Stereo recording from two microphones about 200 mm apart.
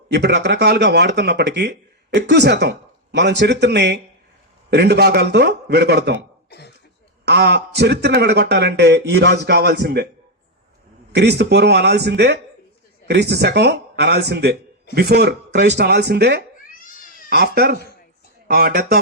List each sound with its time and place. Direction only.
0.1 s speech: 55° right (ahead or behind)
7.3 s speech: 55° right (ahead or behind)
11.1 s speech: 55° right (ahead or behind)
16.6 s a sound: 45° left (ahead or behind)
17.2 s speech: 50° right (ahead or behind)